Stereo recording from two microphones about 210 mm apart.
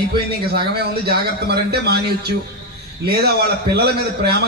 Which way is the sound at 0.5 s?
50° right (ahead or behind).